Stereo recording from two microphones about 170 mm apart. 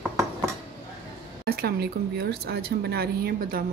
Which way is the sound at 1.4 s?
65° right (ahead or behind).